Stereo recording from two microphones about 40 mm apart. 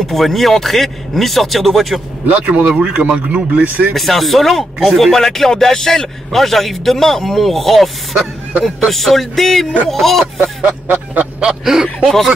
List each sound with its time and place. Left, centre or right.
0.0 s a man's voice: centre
2.2 s a man's voice: right
2.7 s speech: centre
3.0 s a man's voice: right
3.9 s a man's voice: centre
10.6 s speech: right
12.0 s speech: centre